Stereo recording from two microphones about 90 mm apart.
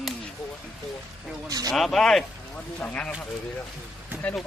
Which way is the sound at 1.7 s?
5° left (ahead or behind).